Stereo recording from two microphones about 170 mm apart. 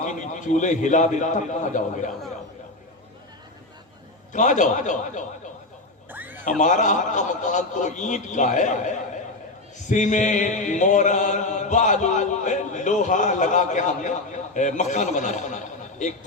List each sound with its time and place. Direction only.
0.0 s chant: 45° left (ahead or behind)
4.3 s chant: 45° left (ahead or behind)
6.1 s music: 10° right (ahead or behind)
6.6 s chant: 45° left (ahead or behind)